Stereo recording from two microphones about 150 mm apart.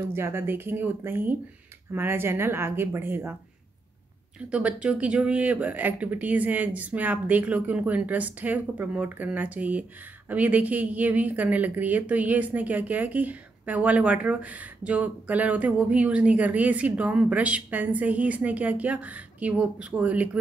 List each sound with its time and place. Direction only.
0.1 s speech: 15° right (ahead or behind)
4.5 s speech: 10° right (ahead or behind)